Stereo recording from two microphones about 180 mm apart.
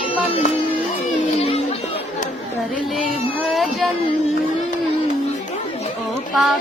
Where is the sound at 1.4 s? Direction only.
35° left (ahead or behind).